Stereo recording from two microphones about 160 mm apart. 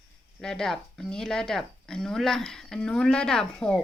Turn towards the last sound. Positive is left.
turn(degrees=5)  # may be behind; listen again after turning